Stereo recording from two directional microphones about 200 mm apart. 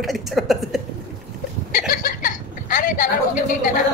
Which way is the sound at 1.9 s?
45° left (ahead or behind).